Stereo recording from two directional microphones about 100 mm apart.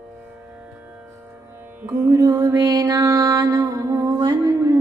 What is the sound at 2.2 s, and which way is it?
Music, 35° right (ahead or behind).